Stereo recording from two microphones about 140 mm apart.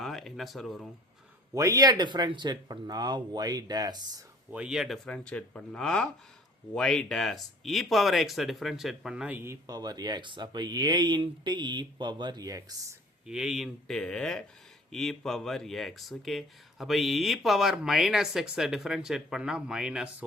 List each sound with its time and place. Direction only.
0.0 s a sound: centre (ahead or behind)
1.5 s speech: 25° right (ahead or behind)
4.5 s speech: 5° right (ahead or behind)
5.0 s speech: 10° left (ahead or behind); by 9.6 s 15° right (ahead or behind)
9.6 s speech: 30° right (ahead or behind)
13.2 s speech: 5° right (ahead or behind)